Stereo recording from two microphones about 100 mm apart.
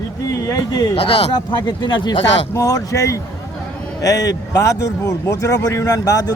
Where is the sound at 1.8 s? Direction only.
45° left (ahead or behind).